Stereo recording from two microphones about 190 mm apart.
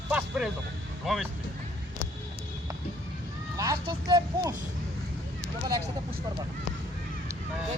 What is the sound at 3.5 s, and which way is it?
Speech, 15° right (ahead or behind).